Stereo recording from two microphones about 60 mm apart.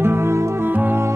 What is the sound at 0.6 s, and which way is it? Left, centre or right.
Music, right.